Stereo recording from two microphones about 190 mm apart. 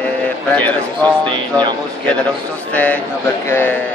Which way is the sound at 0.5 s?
10° left (ahead or behind).